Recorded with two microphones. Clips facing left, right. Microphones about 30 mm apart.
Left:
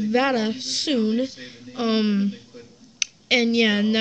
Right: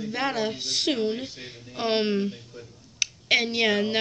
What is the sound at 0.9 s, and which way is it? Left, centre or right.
Speech, centre.